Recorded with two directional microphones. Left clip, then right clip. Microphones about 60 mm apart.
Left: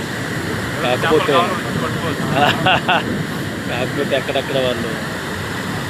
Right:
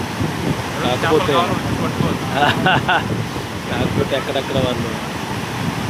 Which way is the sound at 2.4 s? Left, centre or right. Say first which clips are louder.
Left 1 dB; right.